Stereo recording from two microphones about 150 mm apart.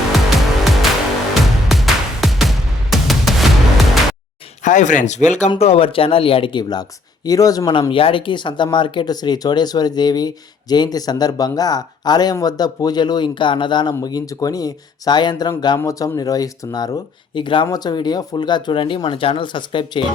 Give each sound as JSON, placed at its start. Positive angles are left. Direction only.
{"t": 0.3, "sound": "music", "side_deg": 0}
{"t": 4.6, "sound": "speech", "side_deg": 55}
{"t": 5.5, "sound": "speech", "side_deg": 40}